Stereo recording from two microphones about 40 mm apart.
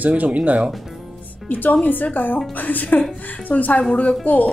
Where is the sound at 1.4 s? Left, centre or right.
Left.